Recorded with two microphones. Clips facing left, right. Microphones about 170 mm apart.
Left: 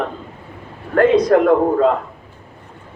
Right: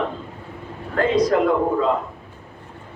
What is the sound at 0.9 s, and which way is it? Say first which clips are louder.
Speech: left 6 dB; 55° left (ahead or behind).